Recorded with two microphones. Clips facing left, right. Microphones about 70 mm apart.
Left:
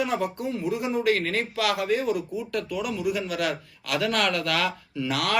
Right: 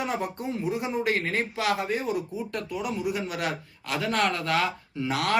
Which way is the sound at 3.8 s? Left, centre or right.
Left.